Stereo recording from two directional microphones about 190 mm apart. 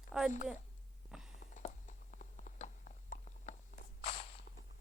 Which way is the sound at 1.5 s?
40° left (ahead or behind).